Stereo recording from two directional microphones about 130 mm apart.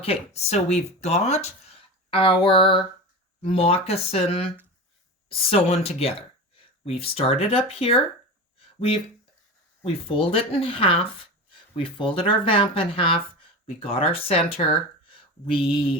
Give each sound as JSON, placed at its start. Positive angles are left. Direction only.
{"t": 0.0, "sound": "speech", "side_deg": 50}
{"t": 8.5, "sound": "a sound", "side_deg": 45}
{"t": 9.8, "sound": "speech", "side_deg": 45}